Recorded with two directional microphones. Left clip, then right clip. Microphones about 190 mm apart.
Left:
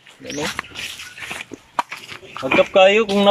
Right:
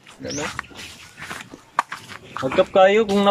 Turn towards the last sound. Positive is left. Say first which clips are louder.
# left 2 dB
turn(degrees=5)  # may be behind; listen again after turning